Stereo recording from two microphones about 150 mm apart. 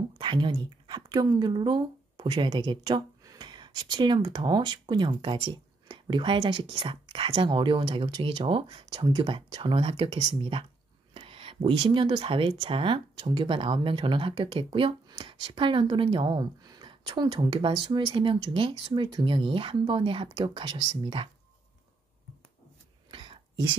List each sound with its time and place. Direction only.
0.2 s speech: 30° right (ahead or behind)
23.1 s whispering: 35° right (ahead or behind)